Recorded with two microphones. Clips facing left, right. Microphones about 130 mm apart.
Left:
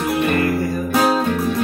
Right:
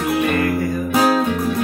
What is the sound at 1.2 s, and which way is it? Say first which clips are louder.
Music: even; 5° right (ahead or behind).